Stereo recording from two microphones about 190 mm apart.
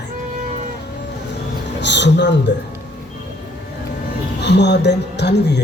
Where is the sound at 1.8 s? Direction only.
65° left (ahead or behind).